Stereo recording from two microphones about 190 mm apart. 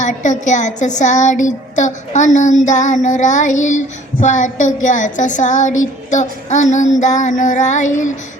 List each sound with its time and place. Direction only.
0.0 s speech: 40° left (ahead or behind)